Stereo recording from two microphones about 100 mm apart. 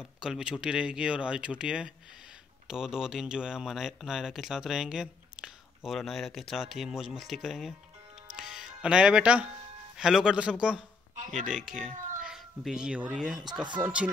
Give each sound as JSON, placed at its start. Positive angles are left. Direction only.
{"t": 0.2, "sound": "a child's voice", "side_deg": -5}
{"t": 13.8, "sound": "speech", "side_deg": -25}